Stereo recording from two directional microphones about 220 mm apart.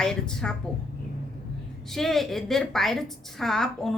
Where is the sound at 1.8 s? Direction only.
Centre (ahead or behind).